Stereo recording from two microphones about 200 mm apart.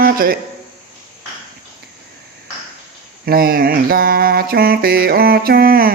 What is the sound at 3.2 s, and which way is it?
Mantra, 50° right (ahead or behind).